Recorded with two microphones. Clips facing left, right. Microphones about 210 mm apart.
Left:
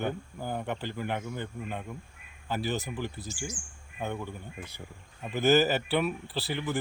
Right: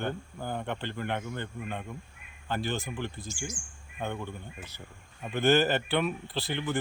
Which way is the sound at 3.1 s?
35° left (ahead or behind).